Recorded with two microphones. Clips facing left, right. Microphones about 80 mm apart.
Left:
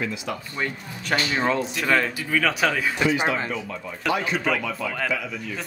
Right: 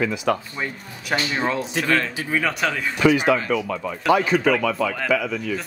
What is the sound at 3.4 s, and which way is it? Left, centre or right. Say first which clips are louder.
Speech: right 7 dB; right.